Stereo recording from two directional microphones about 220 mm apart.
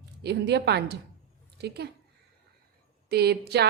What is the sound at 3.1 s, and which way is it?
Speech, 45° right (ahead or behind).